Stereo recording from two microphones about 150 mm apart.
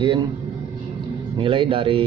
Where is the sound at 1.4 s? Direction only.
35° right (ahead or behind).